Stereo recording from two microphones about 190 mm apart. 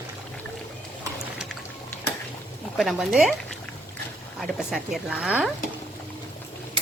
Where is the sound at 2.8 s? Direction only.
Centre (ahead or behind).